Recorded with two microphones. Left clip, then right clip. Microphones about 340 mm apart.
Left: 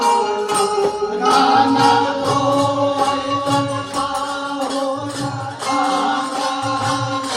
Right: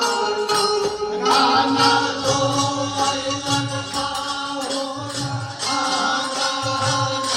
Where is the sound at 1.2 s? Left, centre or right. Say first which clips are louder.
Left 3 dB; left.